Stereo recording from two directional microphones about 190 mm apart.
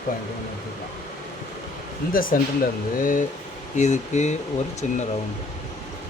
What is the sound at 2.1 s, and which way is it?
Speech, 50° left (ahead or behind).